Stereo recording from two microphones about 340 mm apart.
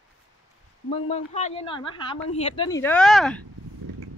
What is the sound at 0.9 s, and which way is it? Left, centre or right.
Speech, centre.